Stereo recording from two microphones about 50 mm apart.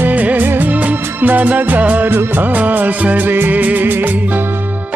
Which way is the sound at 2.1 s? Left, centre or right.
Right.